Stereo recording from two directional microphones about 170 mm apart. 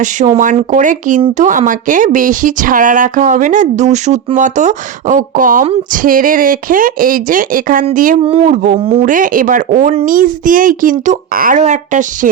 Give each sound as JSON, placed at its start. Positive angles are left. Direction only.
{"t": 0.2, "sound": "speech", "side_deg": -45}
{"t": 8.2, "sound": "a man's voice", "side_deg": -40}
{"t": 9.0, "sound": "speech", "side_deg": -50}
{"t": 10.1, "sound": "speech", "side_deg": -55}